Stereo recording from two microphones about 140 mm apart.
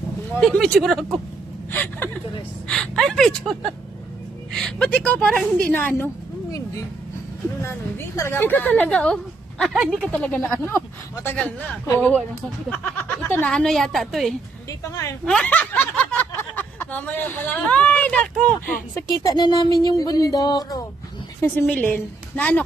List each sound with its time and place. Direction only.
0.4 s a woman's voice: 5° left (ahead or behind)
1.7 s a woman's voice: 15° left (ahead or behind)
8.2 s speech: 15° left (ahead or behind)
11.9 s speech: 10° left (ahead or behind)
13.3 s a woman's voice: 10° left (ahead or behind)
18.9 s a sound: 25° left (ahead or behind)
21.4 s speech: 15° left (ahead or behind)